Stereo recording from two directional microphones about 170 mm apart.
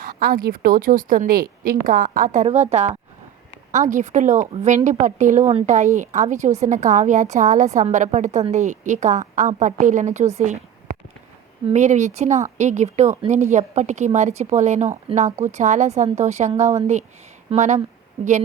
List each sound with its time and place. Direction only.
0.0 s a woman's voice: 60° right (ahead or behind); by 10.6 s 45° right (ahead or behind)
11.7 s a woman's voice: 45° right (ahead or behind)